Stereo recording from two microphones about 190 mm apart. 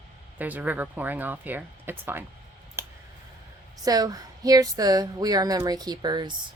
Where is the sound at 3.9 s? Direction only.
20° right (ahead or behind).